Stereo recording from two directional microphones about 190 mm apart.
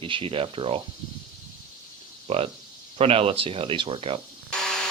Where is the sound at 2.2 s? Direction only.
30° right (ahead or behind).